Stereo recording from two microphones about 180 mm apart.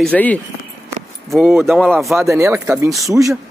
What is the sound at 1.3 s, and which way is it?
Speech, 15° right (ahead or behind).